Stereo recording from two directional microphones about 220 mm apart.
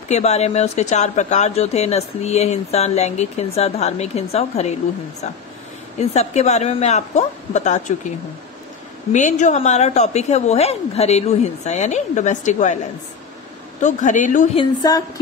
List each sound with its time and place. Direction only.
0.1 s speech: 30° left (ahead or behind)
5.9 s a woman's voice: 30° left (ahead or behind)
9.1 s a woman's voice: 35° left (ahead or behind)
13.8 s a woman's voice: 35° left (ahead or behind)
14.6 s speech: 15° left (ahead or behind)